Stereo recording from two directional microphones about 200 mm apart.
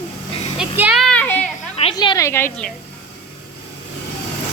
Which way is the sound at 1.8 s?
25° left (ahead or behind).